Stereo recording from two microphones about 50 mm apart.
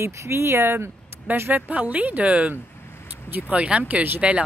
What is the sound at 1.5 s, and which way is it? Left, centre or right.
A woman's voice, right.